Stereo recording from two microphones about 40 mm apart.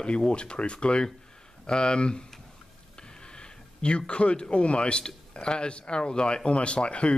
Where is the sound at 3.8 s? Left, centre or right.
Left.